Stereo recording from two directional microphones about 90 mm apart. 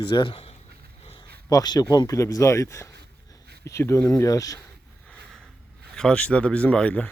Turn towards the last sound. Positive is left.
turn(degrees=15)  # may be behind; listen again after turning